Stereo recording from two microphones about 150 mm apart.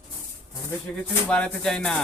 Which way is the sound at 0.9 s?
10° left (ahead or behind).